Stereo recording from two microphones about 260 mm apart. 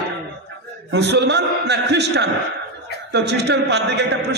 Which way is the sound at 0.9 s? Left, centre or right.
Right.